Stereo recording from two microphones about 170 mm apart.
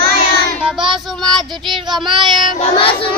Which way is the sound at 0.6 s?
5° right (ahead or behind).